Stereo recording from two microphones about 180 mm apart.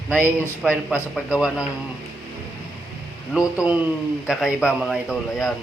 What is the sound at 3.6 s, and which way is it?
A man's voice, 10° right (ahead or behind).